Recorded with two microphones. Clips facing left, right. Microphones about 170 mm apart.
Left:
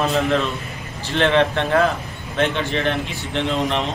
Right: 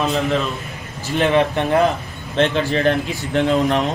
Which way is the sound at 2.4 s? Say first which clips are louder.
Right 3 dB; 35° right (ahead or behind).